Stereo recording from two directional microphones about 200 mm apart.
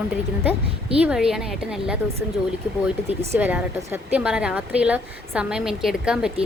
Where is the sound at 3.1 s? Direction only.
10° right (ahead or behind).